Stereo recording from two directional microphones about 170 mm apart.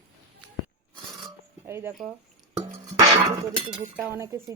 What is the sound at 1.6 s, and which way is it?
Speech, 15° right (ahead or behind).